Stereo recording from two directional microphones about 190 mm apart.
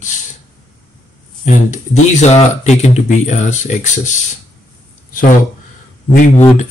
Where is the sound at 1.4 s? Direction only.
40° left (ahead or behind).